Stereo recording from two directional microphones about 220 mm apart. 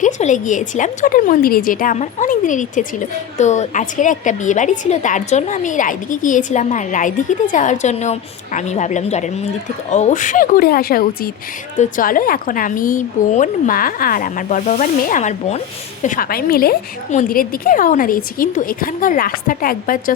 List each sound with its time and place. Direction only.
0.0 s a woman's voice: 35° left (ahead or behind)